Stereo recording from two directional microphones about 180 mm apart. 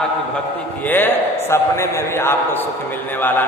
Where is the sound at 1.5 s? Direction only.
15° left (ahead or behind).